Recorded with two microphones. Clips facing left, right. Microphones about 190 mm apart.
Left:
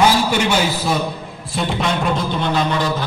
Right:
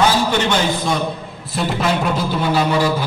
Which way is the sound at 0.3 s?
10° left (ahead or behind).